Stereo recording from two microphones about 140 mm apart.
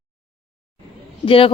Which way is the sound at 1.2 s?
40° left (ahead or behind).